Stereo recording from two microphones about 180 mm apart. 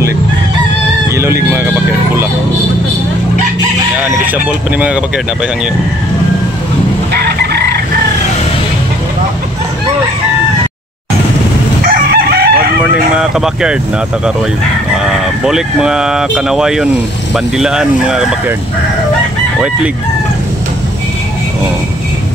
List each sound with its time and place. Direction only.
1.1 s speech: 15° right (ahead or behind)
4.3 s speech: 5° right (ahead or behind)
7.5 s chicken: 60° right (ahead or behind)
11.8 s chicken: 55° right (ahead or behind)
13.1 s speech: 5° right (ahead or behind)
15.4 s speech: 5° right (ahead or behind)